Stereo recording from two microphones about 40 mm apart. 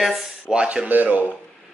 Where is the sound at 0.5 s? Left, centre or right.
Right.